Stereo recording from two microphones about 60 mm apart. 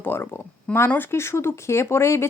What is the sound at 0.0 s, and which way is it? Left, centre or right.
Speech, left.